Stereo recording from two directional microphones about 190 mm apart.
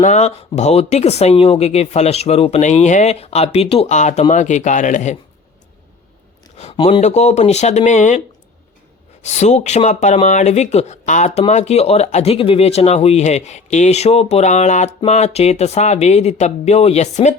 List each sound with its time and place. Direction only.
0.0 s speech: 35° left (ahead or behind)
6.6 s speech: 30° left (ahead or behind)
9.2 s speech: 35° left (ahead or behind)